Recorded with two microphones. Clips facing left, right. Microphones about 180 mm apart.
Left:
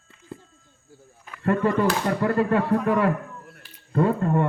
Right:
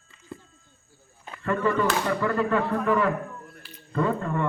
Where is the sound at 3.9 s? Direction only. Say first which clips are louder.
Left 4 dB; 55° left (ahead or behind).